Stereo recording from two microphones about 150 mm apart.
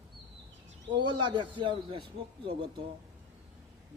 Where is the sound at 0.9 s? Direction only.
30° right (ahead or behind).